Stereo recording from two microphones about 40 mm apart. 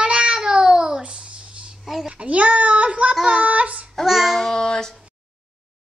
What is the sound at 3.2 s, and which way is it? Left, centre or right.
Speech, right.